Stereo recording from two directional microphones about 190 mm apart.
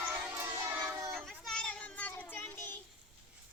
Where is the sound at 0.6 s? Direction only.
15° right (ahead or behind).